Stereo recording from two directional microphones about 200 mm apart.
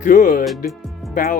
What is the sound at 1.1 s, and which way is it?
Speech, 40° left (ahead or behind).